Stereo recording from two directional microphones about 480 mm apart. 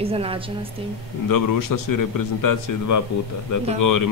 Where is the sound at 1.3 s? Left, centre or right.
Left.